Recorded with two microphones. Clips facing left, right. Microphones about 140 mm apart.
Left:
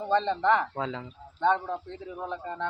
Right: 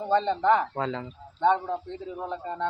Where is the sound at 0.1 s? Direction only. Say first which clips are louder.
Right 2 dB; 10° right (ahead or behind).